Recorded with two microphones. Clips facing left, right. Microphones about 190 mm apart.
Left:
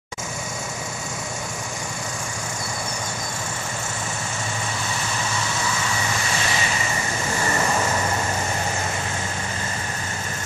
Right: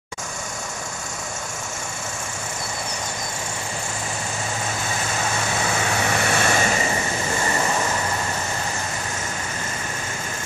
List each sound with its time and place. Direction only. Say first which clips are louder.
5.9 s vehicle: right 4 dB; 60° right (ahead or behind)